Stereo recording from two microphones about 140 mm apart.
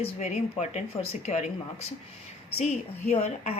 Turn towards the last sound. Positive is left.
turn(degrees=50)  # may be behind; listen again after turning